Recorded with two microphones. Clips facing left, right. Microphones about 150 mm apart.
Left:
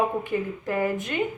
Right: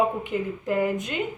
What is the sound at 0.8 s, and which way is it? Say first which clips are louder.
Speech: even; 15° right (ahead or behind).